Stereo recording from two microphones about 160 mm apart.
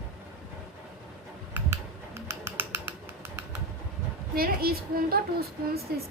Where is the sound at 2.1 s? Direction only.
15° right (ahead or behind).